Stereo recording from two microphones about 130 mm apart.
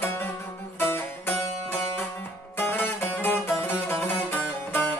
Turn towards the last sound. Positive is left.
turn(degrees=15)  # may be behind; listen again after turning